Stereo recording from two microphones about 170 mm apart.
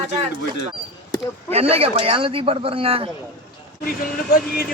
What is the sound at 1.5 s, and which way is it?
Speech, 35° right (ahead or behind).